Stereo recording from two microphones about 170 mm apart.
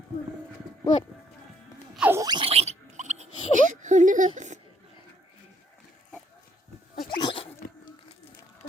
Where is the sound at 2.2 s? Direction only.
30° right (ahead or behind); by 4.6 s 45° right (ahead or behind).